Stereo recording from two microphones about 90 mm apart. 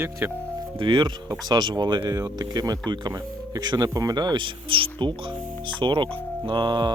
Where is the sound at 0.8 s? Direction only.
60° right (ahead or behind).